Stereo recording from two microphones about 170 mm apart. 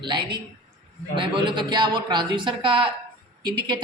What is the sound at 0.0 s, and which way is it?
A woman's voice, 25° right (ahead or behind).